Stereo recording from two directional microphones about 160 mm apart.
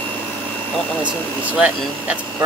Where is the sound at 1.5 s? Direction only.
5° right (ahead or behind).